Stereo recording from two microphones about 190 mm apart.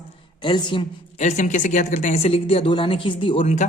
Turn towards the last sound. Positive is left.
turn(degrees=30)  # may be behind; listen again after turning